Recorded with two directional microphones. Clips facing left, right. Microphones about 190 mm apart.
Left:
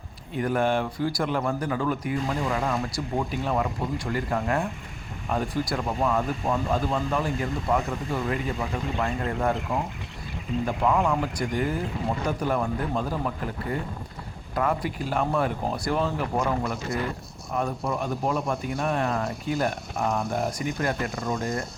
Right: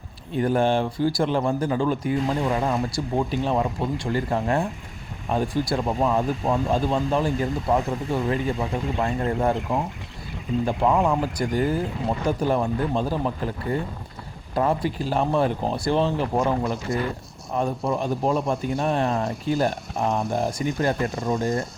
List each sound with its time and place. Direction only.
0.3 s a man's voice: 30° right (ahead or behind)
10.7 s a man's voice: 30° right (ahead or behind)